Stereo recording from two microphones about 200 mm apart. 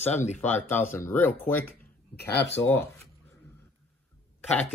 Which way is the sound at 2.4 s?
60° left (ahead or behind).